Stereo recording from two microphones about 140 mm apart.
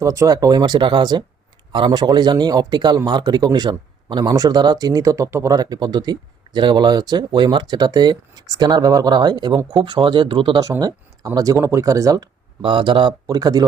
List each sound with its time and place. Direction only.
0.0 s speech: 20° right (ahead or behind)
10.6 s speech: 25° right (ahead or behind)